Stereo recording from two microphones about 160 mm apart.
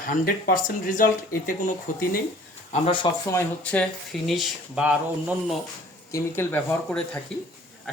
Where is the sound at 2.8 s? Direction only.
30° left (ahead or behind).